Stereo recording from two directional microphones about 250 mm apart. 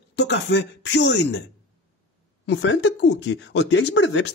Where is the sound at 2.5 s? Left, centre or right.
Left.